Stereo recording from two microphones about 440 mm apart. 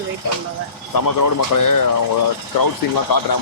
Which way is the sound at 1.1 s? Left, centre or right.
Left.